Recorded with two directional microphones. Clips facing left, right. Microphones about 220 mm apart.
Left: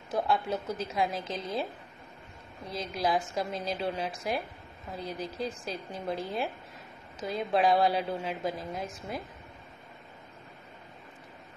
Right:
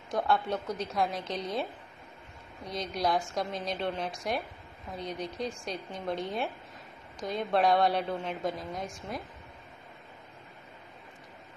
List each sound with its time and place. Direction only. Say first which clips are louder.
0.1 s a woman's voice: even; 5° left (ahead or behind)